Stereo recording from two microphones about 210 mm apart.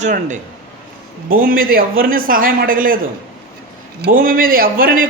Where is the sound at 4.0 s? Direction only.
40° right (ahead or behind).